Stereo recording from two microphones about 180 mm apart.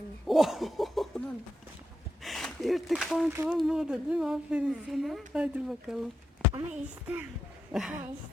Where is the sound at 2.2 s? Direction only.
Centre (ahead or behind).